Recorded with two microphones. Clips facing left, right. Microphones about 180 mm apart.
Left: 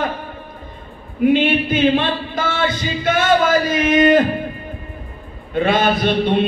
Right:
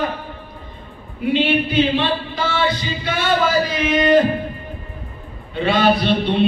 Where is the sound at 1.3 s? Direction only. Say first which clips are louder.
Right 2 dB; 50° left (ahead or behind).